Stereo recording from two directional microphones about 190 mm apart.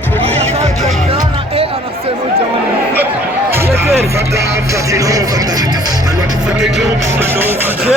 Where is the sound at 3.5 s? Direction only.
10° right (ahead or behind).